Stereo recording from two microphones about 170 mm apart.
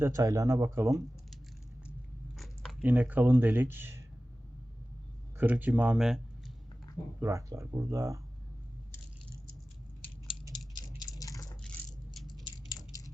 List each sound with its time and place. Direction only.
0.0 s speech: 20° right (ahead or behind)
2.3 s a sound: centre (ahead or behind)
2.8 s speech: 10° right (ahead or behind)
5.4 s speech: 10° right (ahead or behind)
7.2 s speech: 15° right (ahead or behind)
10.8 s tick-tock: 20° left (ahead or behind)
12.3 s a sound: 25° left (ahead or behind)